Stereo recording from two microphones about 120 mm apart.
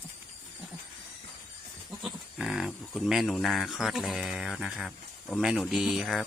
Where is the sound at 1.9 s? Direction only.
Centre (ahead or behind).